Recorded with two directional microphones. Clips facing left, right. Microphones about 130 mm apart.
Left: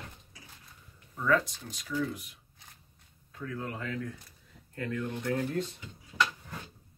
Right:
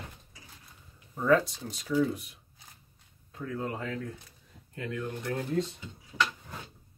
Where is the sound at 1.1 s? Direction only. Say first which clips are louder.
Right 4 dB; 30° right (ahead or behind).